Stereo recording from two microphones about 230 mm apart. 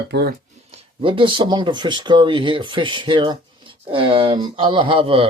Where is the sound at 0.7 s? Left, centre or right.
Right.